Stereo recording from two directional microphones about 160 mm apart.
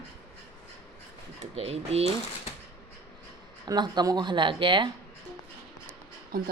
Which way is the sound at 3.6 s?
25° right (ahead or behind).